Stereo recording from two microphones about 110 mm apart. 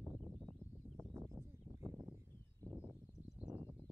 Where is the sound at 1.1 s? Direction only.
25° right (ahead or behind).